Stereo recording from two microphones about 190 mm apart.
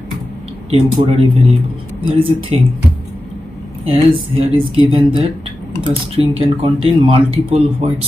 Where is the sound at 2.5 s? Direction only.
30° right (ahead or behind).